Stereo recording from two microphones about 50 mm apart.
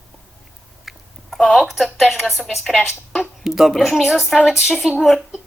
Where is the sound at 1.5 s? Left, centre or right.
Centre.